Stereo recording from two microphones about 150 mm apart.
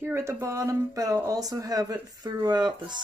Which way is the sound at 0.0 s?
15° right (ahead or behind).